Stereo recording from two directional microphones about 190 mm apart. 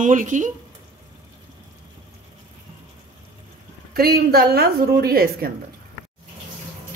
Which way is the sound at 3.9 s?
55° right (ahead or behind).